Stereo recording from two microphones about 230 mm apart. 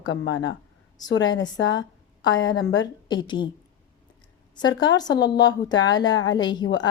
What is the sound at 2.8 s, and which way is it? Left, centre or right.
Speech, centre.